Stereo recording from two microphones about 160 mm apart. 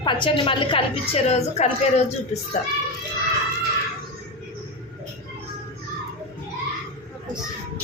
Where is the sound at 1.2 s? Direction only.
45° left (ahead or behind).